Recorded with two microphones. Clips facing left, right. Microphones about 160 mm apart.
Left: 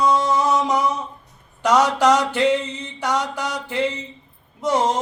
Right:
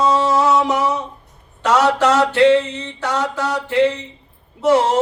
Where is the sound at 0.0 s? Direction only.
85° right.